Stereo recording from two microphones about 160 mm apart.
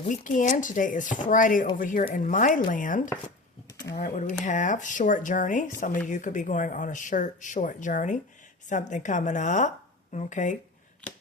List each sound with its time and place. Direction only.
0.1 s speech: 55° left (ahead or behind)